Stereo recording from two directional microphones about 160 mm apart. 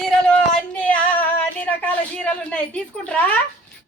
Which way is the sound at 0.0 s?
5° left (ahead or behind).